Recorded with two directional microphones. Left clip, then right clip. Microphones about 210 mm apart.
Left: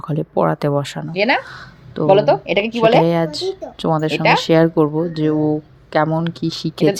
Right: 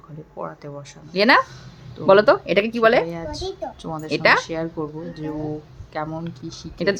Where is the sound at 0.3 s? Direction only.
45° left (ahead or behind).